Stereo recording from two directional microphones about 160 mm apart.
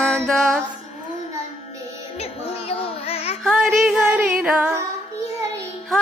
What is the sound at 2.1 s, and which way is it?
Music, 40° left (ahead or behind).